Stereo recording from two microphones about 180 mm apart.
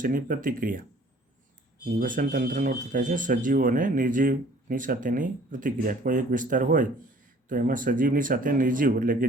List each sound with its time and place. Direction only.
0.0 s speech: 50° right (ahead or behind)
2.0 s speech: 50° right (ahead or behind)